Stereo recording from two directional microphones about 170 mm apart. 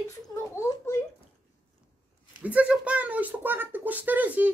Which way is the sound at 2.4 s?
10° right (ahead or behind).